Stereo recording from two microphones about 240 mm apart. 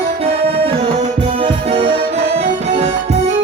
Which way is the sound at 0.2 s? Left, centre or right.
Right.